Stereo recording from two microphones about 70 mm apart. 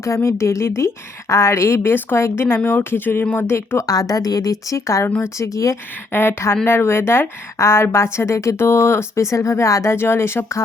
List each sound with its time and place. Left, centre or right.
0.0 s a woman's voice: left
3.8 s a woman's voice: left
5.0 s a woman's voice: left
5.4 s speech: left
6.1 s a woman's voice: left